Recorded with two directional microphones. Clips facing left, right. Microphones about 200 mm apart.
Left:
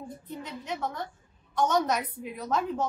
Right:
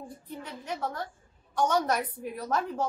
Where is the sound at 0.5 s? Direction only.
10° right (ahead or behind).